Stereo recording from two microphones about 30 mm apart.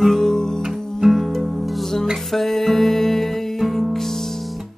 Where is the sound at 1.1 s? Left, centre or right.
Centre.